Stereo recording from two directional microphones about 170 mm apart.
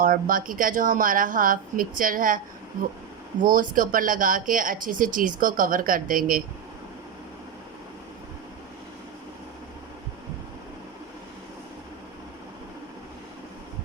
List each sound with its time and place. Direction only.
0.0 s speech: 55° right (ahead or behind)
3.4 s speech: 50° right (ahead or behind)